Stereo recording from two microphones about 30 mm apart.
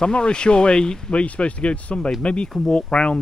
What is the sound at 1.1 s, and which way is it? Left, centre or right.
Speech, left.